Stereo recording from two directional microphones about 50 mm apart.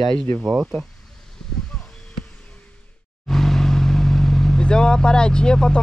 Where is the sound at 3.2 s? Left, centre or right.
Centre.